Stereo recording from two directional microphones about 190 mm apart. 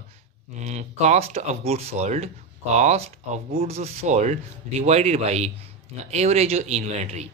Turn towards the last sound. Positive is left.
turn(degrees=-35)  # may be behind; listen again after turning